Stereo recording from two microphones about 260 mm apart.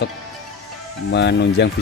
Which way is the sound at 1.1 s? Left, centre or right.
Left.